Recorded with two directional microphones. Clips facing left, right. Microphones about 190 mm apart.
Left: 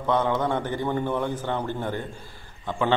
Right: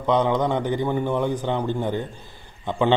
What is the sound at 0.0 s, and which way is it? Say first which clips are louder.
A man's voice: right 3 dB; 15° right (ahead or behind).